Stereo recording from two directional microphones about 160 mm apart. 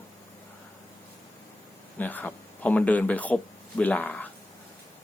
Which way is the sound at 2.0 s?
10° left (ahead or behind).